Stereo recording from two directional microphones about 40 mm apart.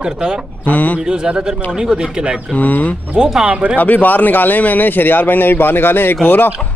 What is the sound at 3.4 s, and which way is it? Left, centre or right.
Speech, right.